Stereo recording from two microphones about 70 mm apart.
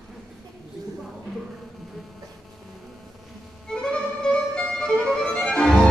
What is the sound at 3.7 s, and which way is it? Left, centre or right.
Violin, centre.